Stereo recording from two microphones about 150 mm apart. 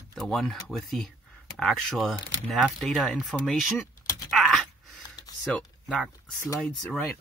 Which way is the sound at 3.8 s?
20° left (ahead or behind).